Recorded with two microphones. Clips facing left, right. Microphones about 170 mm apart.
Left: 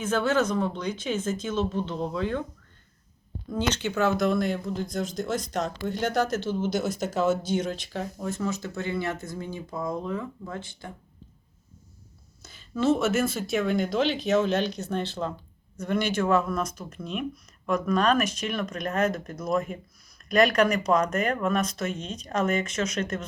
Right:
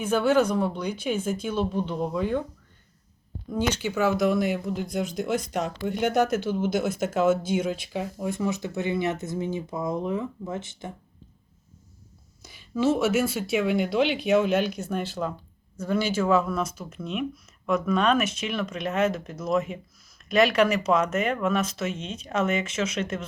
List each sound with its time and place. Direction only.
0.0 s speech: 10° right (ahead or behind)
3.7 s speech: 10° right (ahead or behind)
12.4 s speech: 10° right (ahead or behind)